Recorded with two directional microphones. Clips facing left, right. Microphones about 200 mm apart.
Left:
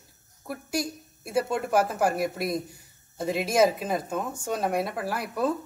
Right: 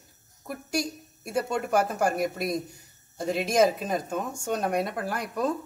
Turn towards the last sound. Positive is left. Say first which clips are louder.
# left 1 dB
turn(degrees=5)  # may be behind; listen again after turning